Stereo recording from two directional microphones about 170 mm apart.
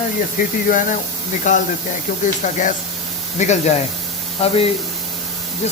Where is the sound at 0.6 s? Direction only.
50° left (ahead or behind).